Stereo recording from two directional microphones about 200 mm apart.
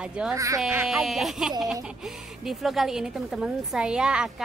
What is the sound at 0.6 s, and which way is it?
A woman's voice, 5° right (ahead or behind).